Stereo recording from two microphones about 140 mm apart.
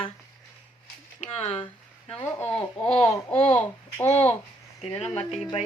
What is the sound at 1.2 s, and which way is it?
Speech, 45° left (ahead or behind).